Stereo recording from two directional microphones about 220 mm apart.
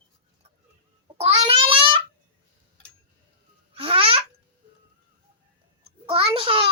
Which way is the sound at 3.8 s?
25° right (ahead or behind).